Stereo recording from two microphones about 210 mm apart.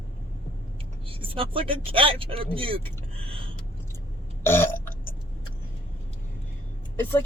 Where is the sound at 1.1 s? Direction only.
25° right (ahead or behind).